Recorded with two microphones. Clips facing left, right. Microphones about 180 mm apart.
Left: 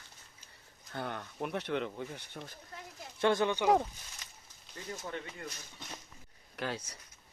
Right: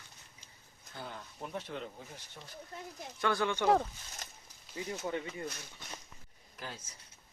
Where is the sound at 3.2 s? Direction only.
20° left (ahead or behind).